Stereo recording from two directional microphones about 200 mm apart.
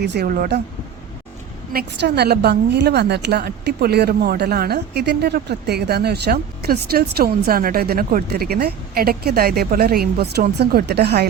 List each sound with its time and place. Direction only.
0.0 s a woman's voice: 55° right (ahead or behind)
1.7 s a woman's voice: 55° right (ahead or behind)